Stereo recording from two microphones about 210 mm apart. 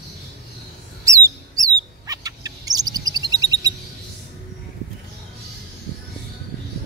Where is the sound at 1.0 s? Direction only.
15° right (ahead or behind).